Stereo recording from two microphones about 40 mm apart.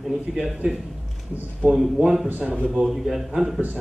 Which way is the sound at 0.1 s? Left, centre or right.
Centre.